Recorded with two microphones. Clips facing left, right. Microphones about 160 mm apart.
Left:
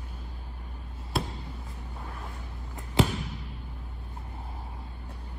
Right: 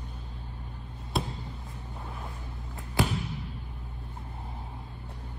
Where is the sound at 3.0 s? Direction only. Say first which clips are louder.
Left 3 dB; 20° left (ahead or behind).